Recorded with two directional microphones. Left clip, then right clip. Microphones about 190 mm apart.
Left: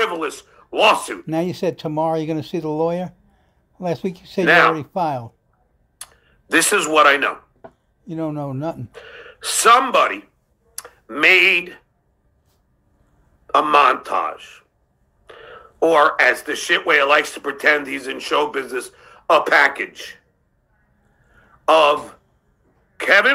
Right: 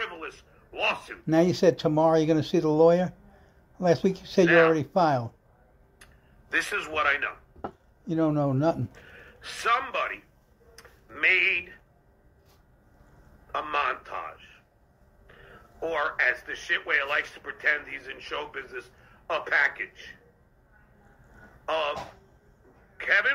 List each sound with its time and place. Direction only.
0.0 s speech: 50° left (ahead or behind)
1.2 s speech: 20° left (ahead or behind)
4.5 s speech: 50° left (ahead or behind)
4.7 s speech: 20° left (ahead or behind)
5.9 s speech: 50° left (ahead or behind)
8.0 s a man's voice: 15° left (ahead or behind)
8.9 s speech: 50° left (ahead or behind)
13.5 s speech: 50° left (ahead or behind)
21.6 s speech: 50° left (ahead or behind)
22.9 s a man's voice: 50° left (ahead or behind)